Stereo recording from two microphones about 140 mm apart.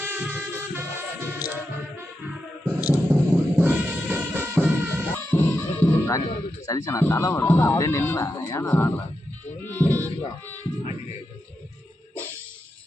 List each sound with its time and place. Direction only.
0.0 s music: 15° right (ahead or behind)
2.6 s music: 10° right (ahead or behind)
5.1 s music: 15° left (ahead or behind)
6.7 s speech: 25° left (ahead or behind)
9.6 s a sound: 15° left (ahead or behind)